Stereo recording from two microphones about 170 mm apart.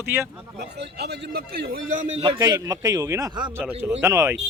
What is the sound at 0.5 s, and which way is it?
A man's voice, 75° right (ahead or behind).